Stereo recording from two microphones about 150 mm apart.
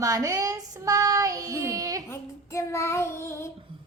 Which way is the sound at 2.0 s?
20° left (ahead or behind).